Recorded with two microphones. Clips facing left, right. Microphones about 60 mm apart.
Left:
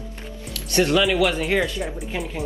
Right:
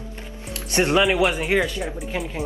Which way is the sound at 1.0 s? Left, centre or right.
Centre.